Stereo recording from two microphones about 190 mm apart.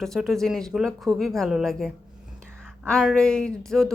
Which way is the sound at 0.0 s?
Centre (ahead or behind).